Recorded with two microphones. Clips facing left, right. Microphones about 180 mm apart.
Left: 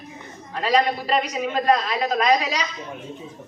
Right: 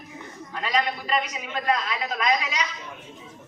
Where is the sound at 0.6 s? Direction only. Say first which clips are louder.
Left 6 dB; 35° left (ahead or behind).